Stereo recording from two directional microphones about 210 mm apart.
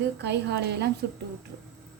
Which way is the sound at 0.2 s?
55° right (ahead or behind).